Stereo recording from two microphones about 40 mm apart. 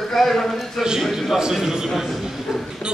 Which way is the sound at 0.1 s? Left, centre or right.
Centre.